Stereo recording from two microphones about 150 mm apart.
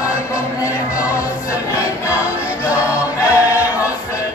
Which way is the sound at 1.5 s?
20° left (ahead or behind).